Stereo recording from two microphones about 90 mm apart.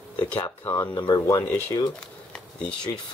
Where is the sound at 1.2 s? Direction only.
35° left (ahead or behind).